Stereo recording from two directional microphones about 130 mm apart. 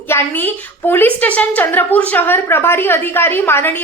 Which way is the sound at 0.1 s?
15° left (ahead or behind).